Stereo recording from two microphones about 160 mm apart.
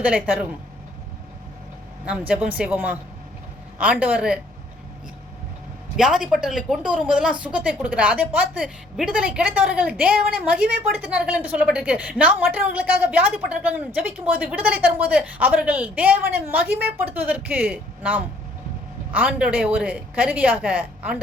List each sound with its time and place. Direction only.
0.0 s a woman's voice: 5° right (ahead or behind)
2.0 s a woman's voice: 5° right (ahead or behind)
6.0 s a woman's voice: 5° right (ahead or behind)